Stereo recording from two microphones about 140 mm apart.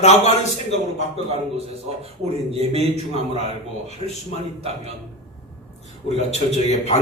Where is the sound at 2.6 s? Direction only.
50° right (ahead or behind).